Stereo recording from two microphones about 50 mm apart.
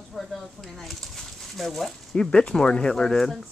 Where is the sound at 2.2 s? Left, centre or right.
Centre.